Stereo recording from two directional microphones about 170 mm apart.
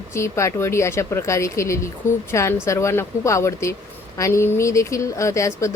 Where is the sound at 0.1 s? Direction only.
15° left (ahead or behind).